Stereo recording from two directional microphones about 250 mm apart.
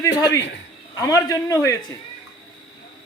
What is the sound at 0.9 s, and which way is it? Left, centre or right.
Speech, centre.